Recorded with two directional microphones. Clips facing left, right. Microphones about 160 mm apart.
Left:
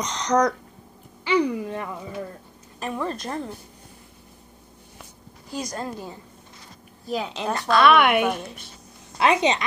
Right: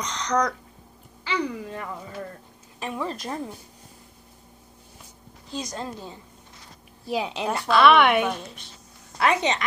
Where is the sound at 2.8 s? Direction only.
5° right (ahead or behind).